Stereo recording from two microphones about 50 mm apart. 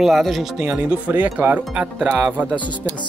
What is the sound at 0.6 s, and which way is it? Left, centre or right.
Speech, right.